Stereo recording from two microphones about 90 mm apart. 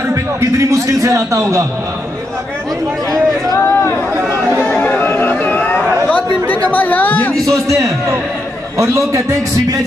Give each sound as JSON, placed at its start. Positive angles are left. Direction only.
{"t": 0.1, "sound": "a man's voice", "side_deg": -35}
{"t": 3.5, "sound": "chatter", "side_deg": 35}
{"t": 4.6, "sound": "chatter", "side_deg": 15}
{"t": 7.6, "sound": "a man's voice", "side_deg": -35}